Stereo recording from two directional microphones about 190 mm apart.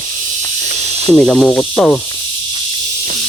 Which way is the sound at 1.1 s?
Centre (ahead or behind).